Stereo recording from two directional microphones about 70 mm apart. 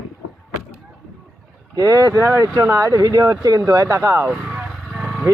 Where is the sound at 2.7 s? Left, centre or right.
Right.